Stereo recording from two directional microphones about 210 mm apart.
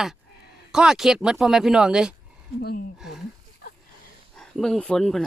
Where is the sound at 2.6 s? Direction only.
50° left (ahead or behind).